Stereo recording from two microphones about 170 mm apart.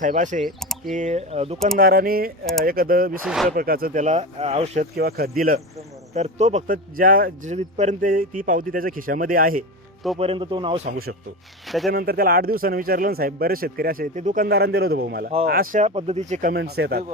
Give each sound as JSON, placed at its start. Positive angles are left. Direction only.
{"t": 0.0, "sound": "speech", "side_deg": -50}
{"t": 0.4, "sound": "speech", "side_deg": 0}
{"t": 0.9, "sound": "speech", "side_deg": -40}
{"t": 1.8, "sound": "speech", "side_deg": -60}
{"t": 3.2, "sound": "speech", "side_deg": 0}
{"t": 3.5, "sound": "speech", "side_deg": -60}
{"t": 4.9, "sound": "speech", "side_deg": -65}
{"t": 6.1, "sound": "speech", "side_deg": -40}
{"t": 7.5, "sound": "speech", "side_deg": -45}
{"t": 10.2, "sound": "speech", "side_deg": -35}
{"t": 11.9, "sound": "speech", "side_deg": -60}
{"t": 14.4, "sound": "a man's voice", "side_deg": -65}
{"t": 15.8, "sound": "speech", "side_deg": -40}
{"t": 16.5, "sound": "a man's voice", "side_deg": -70}